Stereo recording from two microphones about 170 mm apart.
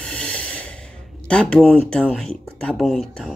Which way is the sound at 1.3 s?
5° left (ahead or behind).